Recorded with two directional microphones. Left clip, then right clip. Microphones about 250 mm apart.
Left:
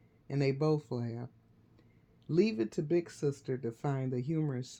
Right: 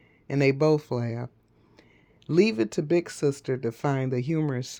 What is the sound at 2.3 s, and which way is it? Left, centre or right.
Speech, right.